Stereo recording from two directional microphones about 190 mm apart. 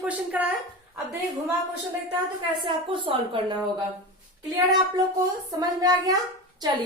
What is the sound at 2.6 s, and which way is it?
Speech, 25° right (ahead or behind).